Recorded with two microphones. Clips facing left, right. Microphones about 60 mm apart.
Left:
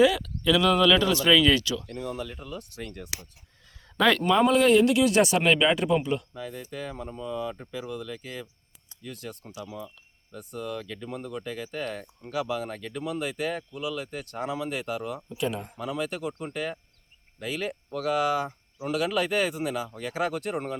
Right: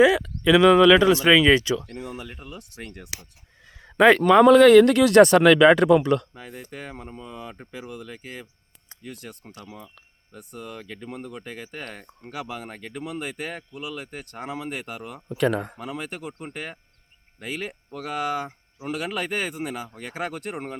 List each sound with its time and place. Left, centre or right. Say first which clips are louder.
0.0 s speech: right 4 dB; right
3.7 s a sound: right 7 dB; right
4.4 s speech: right 9 dB; right
6.7 s speech: left 2 dB; right
10.3 s speech: left 4 dB; centre
10.8 s speech: left 1 dB; right
11.1 s speech: left 2 dB; centre
11.4 s speech: left 3 dB; right; by 15.2 s centre
15.4 s speech: right 8 dB; right
16.5 s speech: left 3 dB; right